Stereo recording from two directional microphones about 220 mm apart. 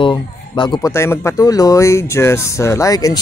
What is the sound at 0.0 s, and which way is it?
A man's voice, 20° left (ahead or behind).